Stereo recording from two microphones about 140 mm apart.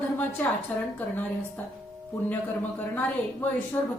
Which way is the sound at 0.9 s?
10° left (ahead or behind).